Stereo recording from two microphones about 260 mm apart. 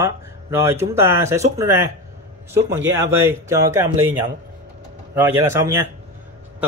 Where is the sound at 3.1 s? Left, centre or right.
Centre.